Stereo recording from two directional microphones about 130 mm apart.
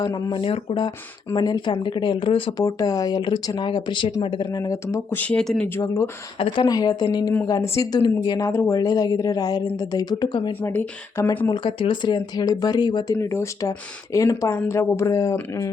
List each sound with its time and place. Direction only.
0.0 s speech: 35° left (ahead or behind)
2.6 s speech: 30° left (ahead or behind)
4.6 s speech: 25° left (ahead or behind)
5.1 s speech: 10° left (ahead or behind)
5.6 s speech: 20° left (ahead or behind)
6.7 s speech: 30° left (ahead or behind)
10.6 s speech: 10° left (ahead or behind)
11.4 s speech: 35° left (ahead or behind)
13.1 s speech: 20° left (ahead or behind)